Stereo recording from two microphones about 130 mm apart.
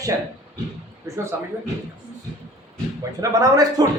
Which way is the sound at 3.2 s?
25° right (ahead or behind).